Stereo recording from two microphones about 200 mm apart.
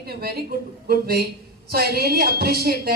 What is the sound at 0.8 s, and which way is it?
A woman's voice, 50° right (ahead or behind).